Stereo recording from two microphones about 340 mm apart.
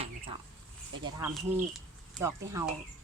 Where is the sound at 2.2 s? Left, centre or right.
Centre.